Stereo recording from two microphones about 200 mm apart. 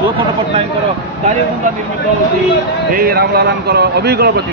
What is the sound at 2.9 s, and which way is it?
A man's voice, 50° right (ahead or behind).